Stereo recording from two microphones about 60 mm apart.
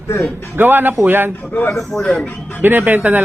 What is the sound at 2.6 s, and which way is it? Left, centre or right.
Speech, right.